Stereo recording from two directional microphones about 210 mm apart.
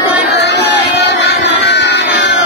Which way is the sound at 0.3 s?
55° left (ahead or behind).